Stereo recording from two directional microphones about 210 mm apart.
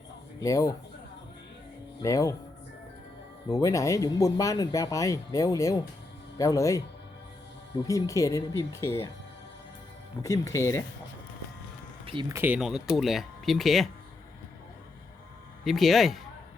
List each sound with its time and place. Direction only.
0.3 s speech: 15° left (ahead or behind)
2.0 s speech: 15° left (ahead or behind)
3.5 s speech: 15° left (ahead or behind)
7.9 s speech: 15° left (ahead or behind)
10.2 s speech: 15° left (ahead or behind)
12.3 s speech: 10° right (ahead or behind)
15.6 s speech: centre (ahead or behind)